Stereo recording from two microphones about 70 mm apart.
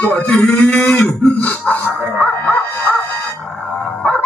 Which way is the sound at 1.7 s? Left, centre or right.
Left.